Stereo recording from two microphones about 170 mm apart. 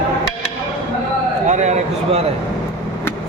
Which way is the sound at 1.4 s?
45° right (ahead or behind).